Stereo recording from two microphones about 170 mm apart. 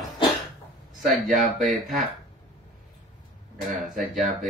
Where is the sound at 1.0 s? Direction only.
50° right (ahead or behind).